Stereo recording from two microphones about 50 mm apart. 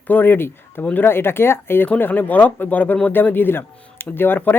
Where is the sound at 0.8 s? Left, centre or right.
Left.